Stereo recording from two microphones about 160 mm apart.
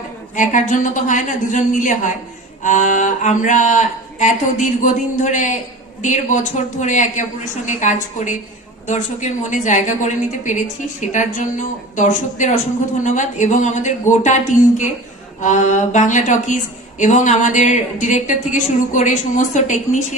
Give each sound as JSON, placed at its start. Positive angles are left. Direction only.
{"t": 0.3, "sound": "speech", "side_deg": 55}